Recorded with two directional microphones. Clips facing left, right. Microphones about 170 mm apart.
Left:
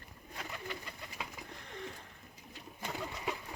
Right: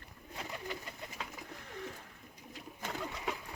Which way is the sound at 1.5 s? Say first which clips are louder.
Right 1 dB; 5° right (ahead or behind).